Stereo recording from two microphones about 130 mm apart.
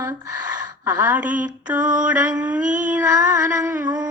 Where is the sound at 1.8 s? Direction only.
80° right.